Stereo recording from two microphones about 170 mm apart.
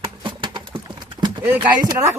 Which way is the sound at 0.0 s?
30° right (ahead or behind).